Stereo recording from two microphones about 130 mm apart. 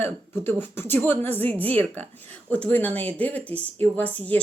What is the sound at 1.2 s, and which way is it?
Speech, 50° right (ahead or behind).